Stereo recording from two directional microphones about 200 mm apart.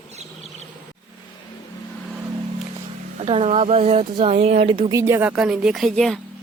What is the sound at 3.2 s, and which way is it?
Speech, 30° right (ahead or behind).